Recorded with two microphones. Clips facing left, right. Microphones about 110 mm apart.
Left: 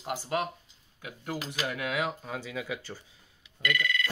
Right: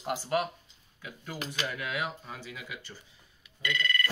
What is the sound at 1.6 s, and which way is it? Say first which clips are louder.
Speech: left 4 dB; 90° left.